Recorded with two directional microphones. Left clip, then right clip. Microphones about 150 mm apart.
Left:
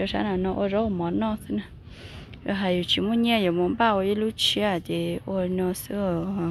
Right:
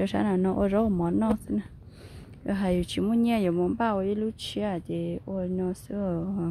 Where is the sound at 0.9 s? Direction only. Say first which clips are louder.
Even; 40° right (ahead or behind).